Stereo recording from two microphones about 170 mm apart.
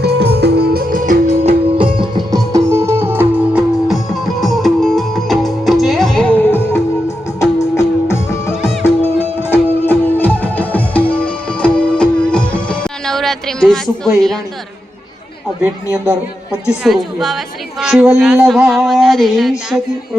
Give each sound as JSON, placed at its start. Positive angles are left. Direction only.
{"t": 0.0, "sound": "music", "side_deg": -75}
{"t": 1.3, "sound": "music", "side_deg": -35}
{"t": 16.0, "sound": "a sound", "side_deg": -5}